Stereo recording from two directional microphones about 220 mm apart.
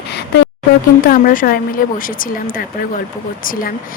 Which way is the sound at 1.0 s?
40° left (ahead or behind).